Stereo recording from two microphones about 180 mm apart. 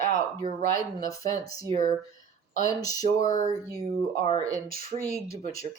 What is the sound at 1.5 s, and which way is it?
Speech, 20° left (ahead or behind).